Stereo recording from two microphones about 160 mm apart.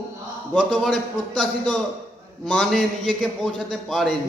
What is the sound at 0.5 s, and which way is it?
A man's voice, 5° left (ahead or behind).